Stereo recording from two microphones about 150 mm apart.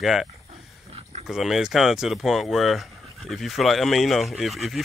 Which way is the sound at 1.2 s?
5° right (ahead or behind).